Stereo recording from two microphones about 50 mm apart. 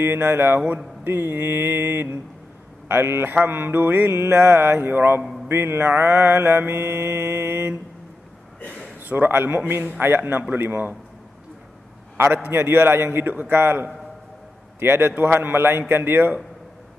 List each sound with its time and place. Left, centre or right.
0.0 s mantra: right
8.5 s a sound: left
9.0 s a man's voice: right
9.7 s mantra: right
12.4 s mantra: right